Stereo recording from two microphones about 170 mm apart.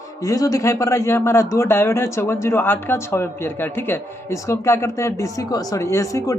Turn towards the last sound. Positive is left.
turn(degrees=20)  # may be behind; listen again after turning